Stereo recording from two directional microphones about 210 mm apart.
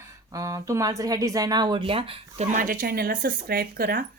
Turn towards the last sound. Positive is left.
turn(degrees=-45)  # may be behind; listen again after turning